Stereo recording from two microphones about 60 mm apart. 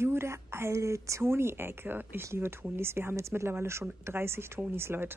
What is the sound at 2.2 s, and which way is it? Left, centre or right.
Speech, right.